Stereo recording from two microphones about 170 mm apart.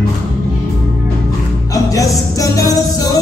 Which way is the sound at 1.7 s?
20° left (ahead or behind).